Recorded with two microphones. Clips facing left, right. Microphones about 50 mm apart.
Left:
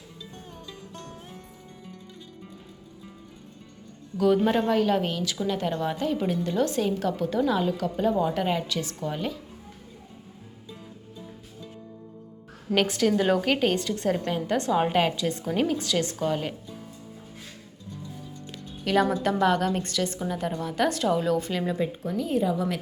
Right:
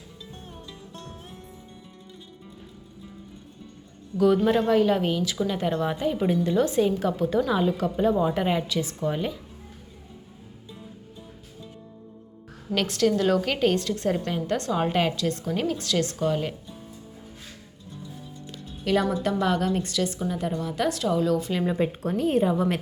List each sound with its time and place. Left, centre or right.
4.4 s a woman's voice: centre
12.7 s a woman's voice: centre
18.9 s a woman's voice: centre
21.3 s a woman's voice: centre
21.8 s a woman's voice: right